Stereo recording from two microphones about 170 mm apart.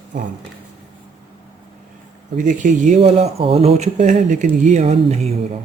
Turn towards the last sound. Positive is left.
turn(degrees=-40)  # may be behind; listen again after turning